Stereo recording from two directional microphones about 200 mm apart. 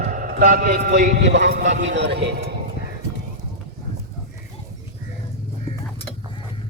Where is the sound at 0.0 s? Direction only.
40° right (ahead or behind).